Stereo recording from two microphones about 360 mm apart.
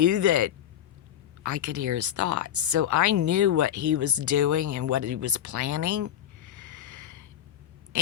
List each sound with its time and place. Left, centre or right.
0.0 s speech: right